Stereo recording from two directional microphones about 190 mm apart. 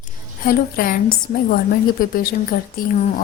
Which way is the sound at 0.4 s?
50° left (ahead or behind).